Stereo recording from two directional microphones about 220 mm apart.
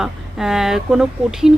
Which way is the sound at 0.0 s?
Centre (ahead or behind).